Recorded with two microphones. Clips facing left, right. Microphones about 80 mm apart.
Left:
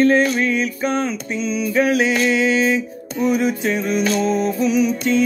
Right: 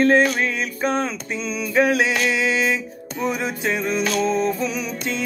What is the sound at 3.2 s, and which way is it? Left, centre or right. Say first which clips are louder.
Music: left 5 dB; right.